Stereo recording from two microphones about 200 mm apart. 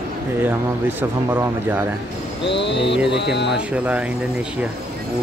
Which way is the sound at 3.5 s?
5° right (ahead or behind).